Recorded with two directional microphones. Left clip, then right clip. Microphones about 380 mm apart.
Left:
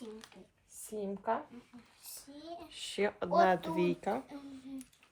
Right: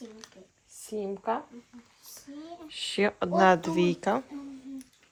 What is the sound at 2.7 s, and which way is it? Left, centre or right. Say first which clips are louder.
Speech: right 7 dB; right.